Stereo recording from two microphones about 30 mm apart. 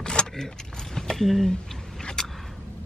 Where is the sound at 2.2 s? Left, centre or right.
Centre.